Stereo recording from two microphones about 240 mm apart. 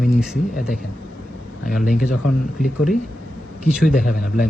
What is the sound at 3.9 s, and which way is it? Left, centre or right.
Speech, left.